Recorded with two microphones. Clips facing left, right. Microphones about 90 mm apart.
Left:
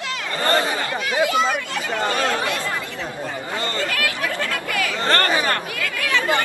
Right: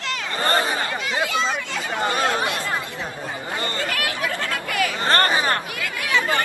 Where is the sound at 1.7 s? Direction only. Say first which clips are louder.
Left 1 dB; 15° right (ahead or behind).